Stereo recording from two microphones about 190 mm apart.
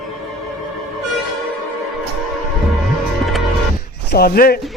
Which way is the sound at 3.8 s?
50° left (ahead or behind).